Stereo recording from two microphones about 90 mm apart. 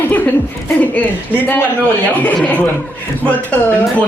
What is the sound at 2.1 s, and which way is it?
Speech, 20° left (ahead or behind).